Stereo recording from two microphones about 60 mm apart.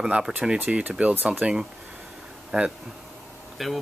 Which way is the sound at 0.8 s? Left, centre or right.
Right.